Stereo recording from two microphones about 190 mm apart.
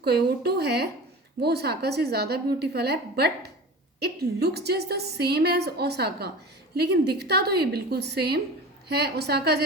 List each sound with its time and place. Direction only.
0.0 s a woman's voice: 55° right (ahead or behind)